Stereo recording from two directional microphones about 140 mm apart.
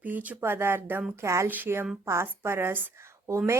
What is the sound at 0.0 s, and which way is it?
A woman's voice, 10° right (ahead or behind).